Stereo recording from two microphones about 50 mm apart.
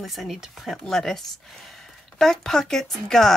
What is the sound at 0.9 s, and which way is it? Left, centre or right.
Speech, centre.